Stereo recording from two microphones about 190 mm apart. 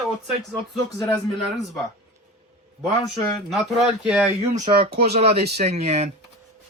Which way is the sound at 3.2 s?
Centre (ahead or behind).